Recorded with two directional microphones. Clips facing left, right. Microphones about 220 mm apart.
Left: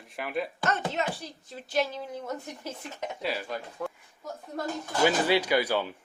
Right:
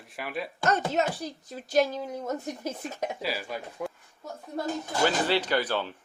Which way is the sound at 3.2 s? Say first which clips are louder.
Even; 5° right (ahead or behind).